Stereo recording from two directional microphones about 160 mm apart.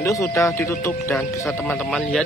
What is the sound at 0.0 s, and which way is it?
A man's voice, 20° left (ahead or behind).